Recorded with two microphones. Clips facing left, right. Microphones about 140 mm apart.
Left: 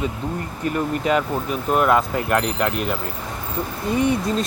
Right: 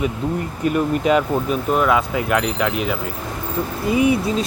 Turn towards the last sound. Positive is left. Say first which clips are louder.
# right 3 dB
turn(degrees=-5)  # may be behind; listen again after turning